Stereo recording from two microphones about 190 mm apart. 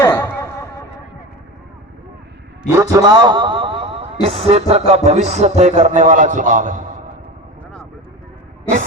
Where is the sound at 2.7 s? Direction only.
15° right (ahead or behind).